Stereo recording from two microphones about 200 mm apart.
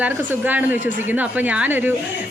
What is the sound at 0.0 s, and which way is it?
A woman's voice, 10° right (ahead or behind).